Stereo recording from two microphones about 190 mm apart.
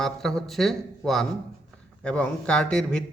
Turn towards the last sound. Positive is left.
turn(degrees=5)  # may be behind; listen again after turning